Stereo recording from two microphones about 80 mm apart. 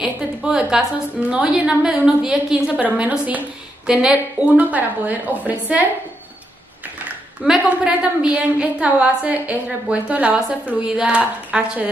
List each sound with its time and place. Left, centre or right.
0.0 s a sound: centre
1.3 s a woman's voice: centre
7.4 s a woman's voice: centre